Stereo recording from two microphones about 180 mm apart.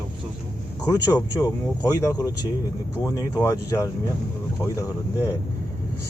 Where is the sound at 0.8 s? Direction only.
20° left (ahead or behind).